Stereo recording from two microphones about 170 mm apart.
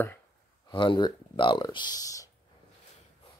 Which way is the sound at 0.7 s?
30° left (ahead or behind).